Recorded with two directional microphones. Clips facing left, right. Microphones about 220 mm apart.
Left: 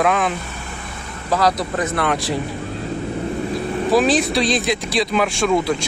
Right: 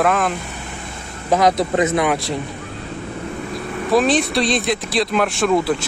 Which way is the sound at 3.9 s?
Centre (ahead or behind).